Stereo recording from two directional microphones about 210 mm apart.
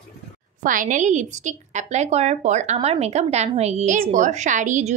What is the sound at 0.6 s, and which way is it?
A woman's voice, 40° right (ahead or behind).